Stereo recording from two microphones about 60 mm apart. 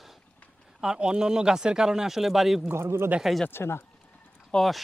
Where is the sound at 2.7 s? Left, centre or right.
Right.